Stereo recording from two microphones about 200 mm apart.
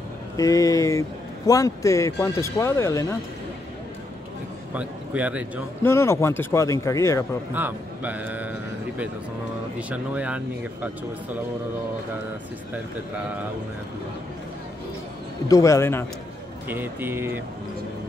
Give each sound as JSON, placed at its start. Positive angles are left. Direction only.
{"t": 0.4, "sound": "speech", "side_deg": 15}
{"t": 4.7, "sound": "a man's voice", "side_deg": -5}
{"t": 5.8, "sound": "speech", "side_deg": 10}
{"t": 7.5, "sound": "a man's voice", "side_deg": -10}
{"t": 15.4, "sound": "speech", "side_deg": 15}
{"t": 16.6, "sound": "a man's voice", "side_deg": -10}